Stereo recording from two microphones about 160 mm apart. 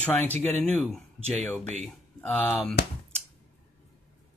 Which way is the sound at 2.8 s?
85° left.